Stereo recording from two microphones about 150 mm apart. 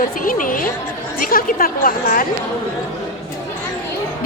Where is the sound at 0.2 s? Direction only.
65° left (ahead or behind).